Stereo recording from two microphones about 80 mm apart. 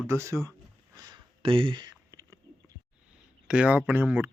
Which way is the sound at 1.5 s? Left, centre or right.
Right.